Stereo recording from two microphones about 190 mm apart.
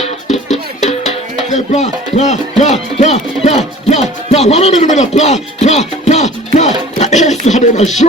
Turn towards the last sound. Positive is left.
turn(degrees=40)  # may be behind; listen again after turning